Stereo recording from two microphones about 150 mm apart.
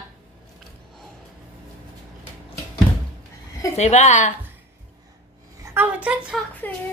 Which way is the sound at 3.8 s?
50° left (ahead or behind).